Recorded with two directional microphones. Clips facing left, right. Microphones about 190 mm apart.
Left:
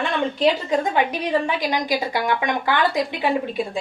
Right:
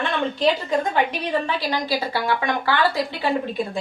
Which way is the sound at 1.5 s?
15° left (ahead or behind).